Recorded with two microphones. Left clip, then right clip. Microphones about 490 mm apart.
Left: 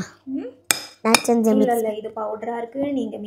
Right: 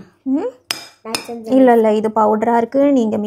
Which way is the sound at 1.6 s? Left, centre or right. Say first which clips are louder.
Right 9 dB; right.